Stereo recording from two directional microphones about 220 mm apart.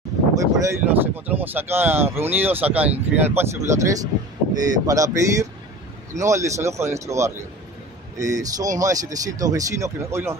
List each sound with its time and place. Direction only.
0.3 s speech: 10° right (ahead or behind)